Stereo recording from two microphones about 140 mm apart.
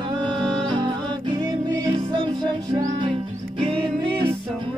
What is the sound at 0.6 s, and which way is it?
Music, 35° right (ahead or behind).